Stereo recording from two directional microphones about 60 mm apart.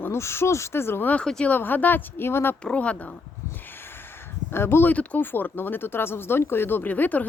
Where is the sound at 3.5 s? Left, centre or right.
Left.